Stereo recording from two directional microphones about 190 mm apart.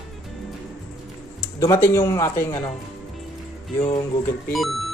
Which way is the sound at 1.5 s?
15° left (ahead or behind).